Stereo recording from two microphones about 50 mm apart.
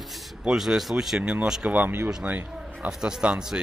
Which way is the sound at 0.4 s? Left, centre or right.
Centre.